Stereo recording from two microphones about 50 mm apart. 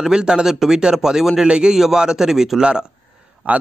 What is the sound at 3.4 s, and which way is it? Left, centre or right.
Speech, right.